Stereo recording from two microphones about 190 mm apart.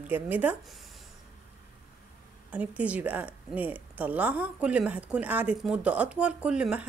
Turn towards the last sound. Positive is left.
turn(degrees=-5)  # may be behind; listen again after turning